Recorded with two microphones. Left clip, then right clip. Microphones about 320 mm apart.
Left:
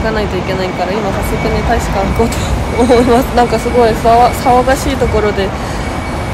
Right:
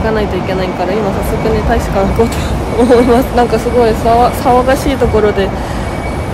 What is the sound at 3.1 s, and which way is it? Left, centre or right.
Speech, centre.